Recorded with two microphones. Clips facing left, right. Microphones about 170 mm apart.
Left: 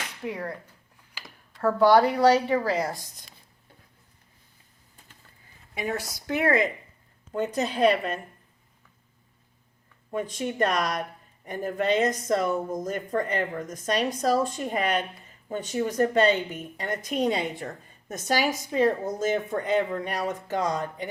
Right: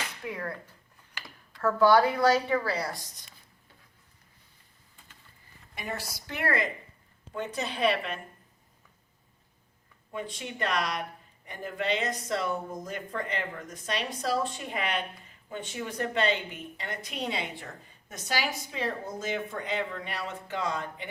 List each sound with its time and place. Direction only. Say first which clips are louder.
0.3 s speech: left 4 dB; 35° left (ahead or behind)
1.6 s speech: left 3 dB; 35° left (ahead or behind)
2.7 s speech: left 5 dB; 50° left (ahead or behind)
6.0 s speech: left 2 dB; 20° left (ahead or behind)
6.3 s speech: left 6 dB; 50° left (ahead or behind)
10.1 s speech: left 7 dB; 45° left (ahead or behind)